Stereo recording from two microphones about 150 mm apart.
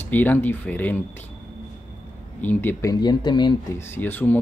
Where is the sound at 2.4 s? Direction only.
10° left (ahead or behind); by 3.5 s 30° left (ahead or behind).